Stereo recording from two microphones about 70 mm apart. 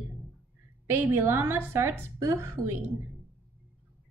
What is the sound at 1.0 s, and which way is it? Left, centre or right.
A woman's voice, right.